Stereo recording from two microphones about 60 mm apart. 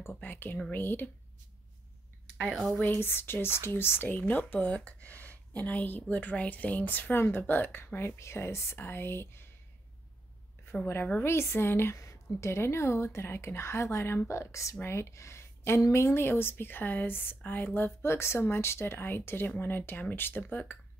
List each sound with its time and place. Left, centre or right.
0.0 s speech: left
2.4 s speech: centre
2.8 s a woman's voice: left
8.7 s speech: left
11.1 s a woman's voice: left
12.0 s a woman's voice: left